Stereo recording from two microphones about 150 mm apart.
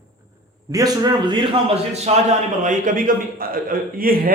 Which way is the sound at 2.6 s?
60° right (ahead or behind).